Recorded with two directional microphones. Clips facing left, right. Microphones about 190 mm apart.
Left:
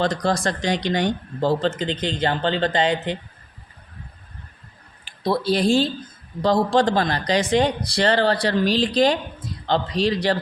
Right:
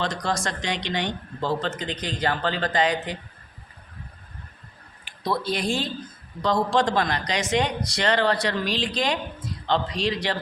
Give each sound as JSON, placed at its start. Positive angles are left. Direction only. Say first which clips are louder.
{"t": 0.0, "sound": "speech", "louder": "left 6 dB", "side_deg": 35}
{"t": 5.0, "sound": "speech", "louder": "left 5 dB", "side_deg": 30}